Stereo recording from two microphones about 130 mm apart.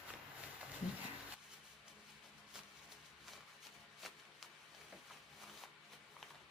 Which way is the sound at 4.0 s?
Centre (ahead or behind).